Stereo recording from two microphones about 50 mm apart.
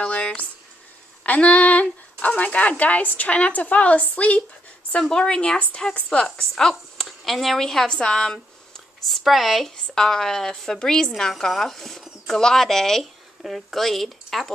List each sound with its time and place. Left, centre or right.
0.0 s a sound: left
1.2 s a woman's voice: left
5.0 s a woman's voice: centre
7.1 s speech: centre
9.0 s speech: centre
9.7 s speech: centre
13.0 s speech: centre